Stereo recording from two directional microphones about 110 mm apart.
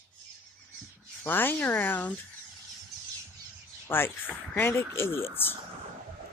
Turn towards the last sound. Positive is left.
turn(degrees=20)  # may be behind; listen again after turning